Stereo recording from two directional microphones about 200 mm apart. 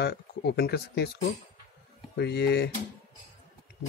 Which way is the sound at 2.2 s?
55° left (ahead or behind).